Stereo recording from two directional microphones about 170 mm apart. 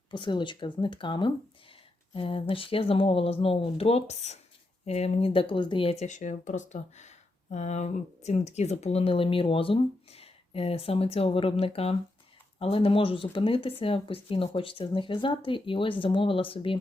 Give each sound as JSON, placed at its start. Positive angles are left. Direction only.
{"t": 0.1, "sound": "speech", "side_deg": 25}